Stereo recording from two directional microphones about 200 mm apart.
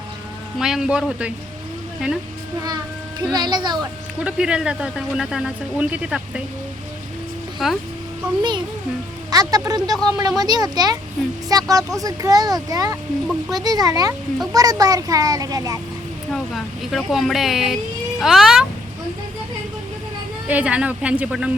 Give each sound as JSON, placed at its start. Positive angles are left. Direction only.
{"t": 0.6, "sound": "speech", "side_deg": -5}
{"t": 2.6, "sound": "a child's voice", "side_deg": -20}
{"t": 4.2, "sound": "speech", "side_deg": -5}
{"t": 7.6, "sound": "speech", "side_deg": 0}
{"t": 8.4, "sound": "speech", "side_deg": -20}
{"t": 16.3, "sound": "speech", "side_deg": 0}
{"t": 20.5, "sound": "speech", "side_deg": -5}